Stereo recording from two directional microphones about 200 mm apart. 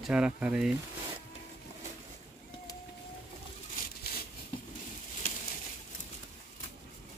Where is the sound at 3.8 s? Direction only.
45° left (ahead or behind).